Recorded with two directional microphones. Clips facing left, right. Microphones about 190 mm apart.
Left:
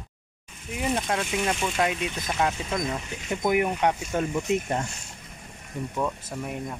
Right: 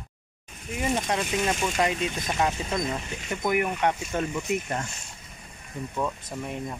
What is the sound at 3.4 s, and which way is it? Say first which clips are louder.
Speech: left 2 dB; 15° left (ahead or behind).